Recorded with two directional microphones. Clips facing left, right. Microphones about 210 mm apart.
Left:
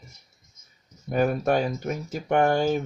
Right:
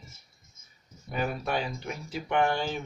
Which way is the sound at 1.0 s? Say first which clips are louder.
Left 9 dB; 45° left (ahead or behind).